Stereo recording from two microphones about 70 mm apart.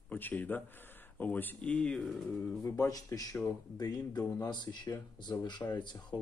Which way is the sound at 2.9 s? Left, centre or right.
Left.